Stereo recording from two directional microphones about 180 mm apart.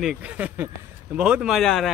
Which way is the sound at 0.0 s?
5° right (ahead or behind).